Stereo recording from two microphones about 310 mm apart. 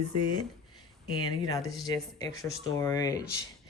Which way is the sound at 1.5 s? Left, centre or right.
Centre.